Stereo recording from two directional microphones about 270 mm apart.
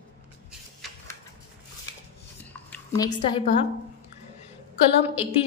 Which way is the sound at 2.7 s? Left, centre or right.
Centre.